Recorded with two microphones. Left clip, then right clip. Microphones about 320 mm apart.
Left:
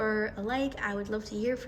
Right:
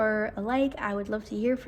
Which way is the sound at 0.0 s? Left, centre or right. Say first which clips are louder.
Right 3 dB; centre.